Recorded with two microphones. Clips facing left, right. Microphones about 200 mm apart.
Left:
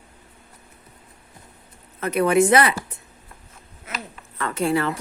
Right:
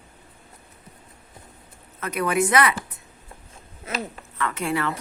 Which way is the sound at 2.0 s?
30° left (ahead or behind).